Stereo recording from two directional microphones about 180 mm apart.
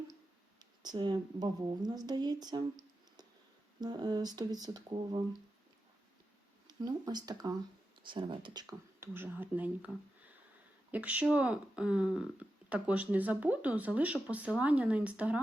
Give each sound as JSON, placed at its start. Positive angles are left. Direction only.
{"t": 0.8, "sound": "speech", "side_deg": -25}
{"t": 3.8, "sound": "speech", "side_deg": -20}
{"t": 6.7, "sound": "speech", "side_deg": -20}
{"t": 10.9, "sound": "speech", "side_deg": -10}